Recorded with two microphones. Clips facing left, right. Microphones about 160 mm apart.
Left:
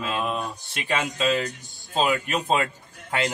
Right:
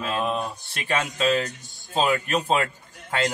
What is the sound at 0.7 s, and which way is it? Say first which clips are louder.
Speech: even; 15° left (ahead or behind).